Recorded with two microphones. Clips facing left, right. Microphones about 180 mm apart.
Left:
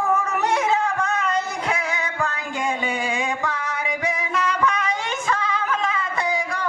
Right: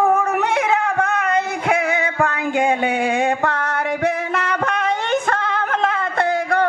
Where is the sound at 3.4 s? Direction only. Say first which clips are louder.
Right 6 dB; 60° right (ahead or behind).